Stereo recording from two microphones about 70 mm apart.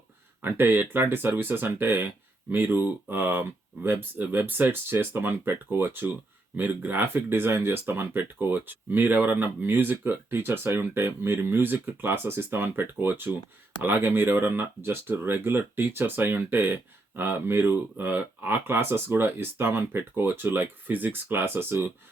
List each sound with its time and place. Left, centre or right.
0.4 s speech: right